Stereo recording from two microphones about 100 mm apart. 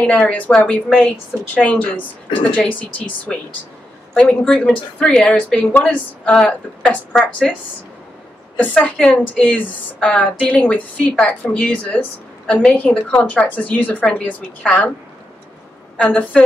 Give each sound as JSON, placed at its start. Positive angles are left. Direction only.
{"t": 0.0, "sound": "a woman's voice", "side_deg": 10}
{"t": 8.5, "sound": "a woman's voice", "side_deg": 15}
{"t": 16.0, "sound": "a woman's voice", "side_deg": 15}